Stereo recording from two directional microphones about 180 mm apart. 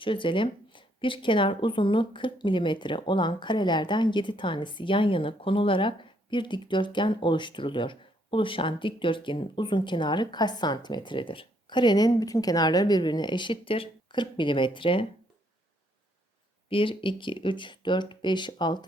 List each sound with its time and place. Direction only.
0.0 s speech: 30° left (ahead or behind)
16.6 s speech: 30° left (ahead or behind)